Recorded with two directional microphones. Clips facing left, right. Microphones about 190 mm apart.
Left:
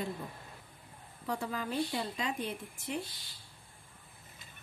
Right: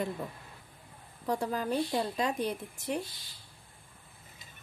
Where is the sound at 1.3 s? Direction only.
40° right (ahead or behind).